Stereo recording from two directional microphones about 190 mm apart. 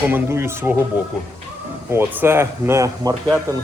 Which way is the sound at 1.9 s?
10° right (ahead or behind).